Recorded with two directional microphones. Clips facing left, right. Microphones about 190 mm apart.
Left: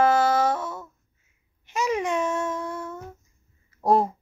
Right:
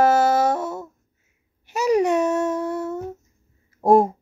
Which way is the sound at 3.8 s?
45° right (ahead or behind).